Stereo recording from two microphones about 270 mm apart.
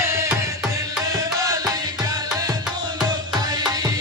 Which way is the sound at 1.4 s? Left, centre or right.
Centre.